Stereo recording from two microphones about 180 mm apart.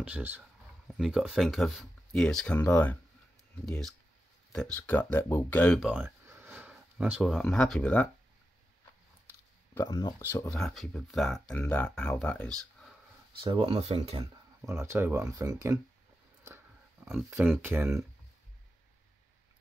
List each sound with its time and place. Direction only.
0.0 s speech: 10° right (ahead or behind)
5.9 s speech: 10° right (ahead or behind); by 8.1 s 10° left (ahead or behind)
9.8 s speech: 25° left (ahead or behind)
10.6 s speech: centre (ahead or behind)
13.4 s speech: 30° right (ahead or behind)
14.7 s speech: 15° right (ahead or behind)
17.0 s speech: centre (ahead or behind)
17.6 s speech: 10° right (ahead or behind)